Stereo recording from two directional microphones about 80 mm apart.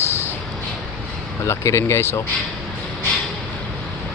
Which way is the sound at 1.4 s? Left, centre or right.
Left.